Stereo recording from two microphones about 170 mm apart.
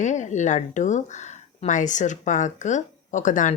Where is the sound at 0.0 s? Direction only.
45° left (ahead or behind).